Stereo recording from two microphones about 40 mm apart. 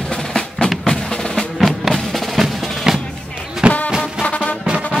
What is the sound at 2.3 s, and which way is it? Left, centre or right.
Percussion, centre.